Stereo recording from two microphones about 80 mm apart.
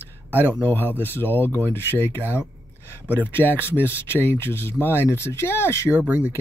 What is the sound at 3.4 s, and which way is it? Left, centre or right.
Speech, left.